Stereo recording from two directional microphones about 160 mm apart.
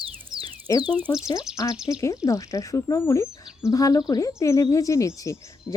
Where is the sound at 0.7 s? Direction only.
25° left (ahead or behind).